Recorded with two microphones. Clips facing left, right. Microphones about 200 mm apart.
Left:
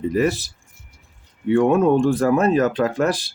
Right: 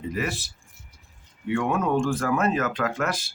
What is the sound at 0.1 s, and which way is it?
Speech, 35° left (ahead or behind).